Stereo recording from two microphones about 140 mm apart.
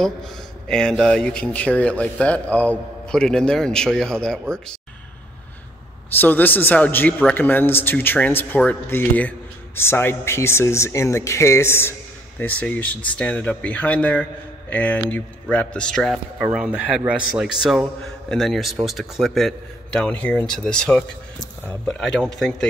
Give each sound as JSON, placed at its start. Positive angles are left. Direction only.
{"t": 0.0, "sound": "speech", "side_deg": 5}
{"t": 6.0, "sound": "a man's voice", "side_deg": 15}
{"t": 16.3, "sound": "speech", "side_deg": -5}